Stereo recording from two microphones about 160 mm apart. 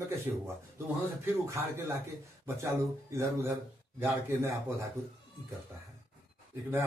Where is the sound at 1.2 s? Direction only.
15° right (ahead or behind).